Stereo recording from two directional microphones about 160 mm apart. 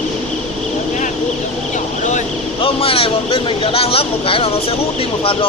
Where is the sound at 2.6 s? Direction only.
35° left (ahead or behind).